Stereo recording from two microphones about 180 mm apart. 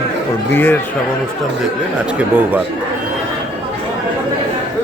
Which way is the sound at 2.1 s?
10° right (ahead or behind).